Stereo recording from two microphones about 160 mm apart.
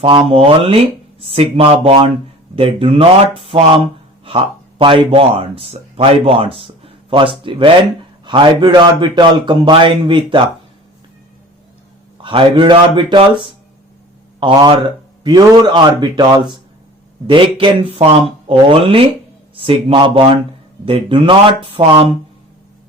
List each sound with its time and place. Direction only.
0.0 s a man's voice: 35° right (ahead or behind)
12.1 s a man's voice: 35° right (ahead or behind)